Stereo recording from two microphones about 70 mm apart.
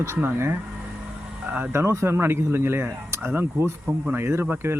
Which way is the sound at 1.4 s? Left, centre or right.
Right.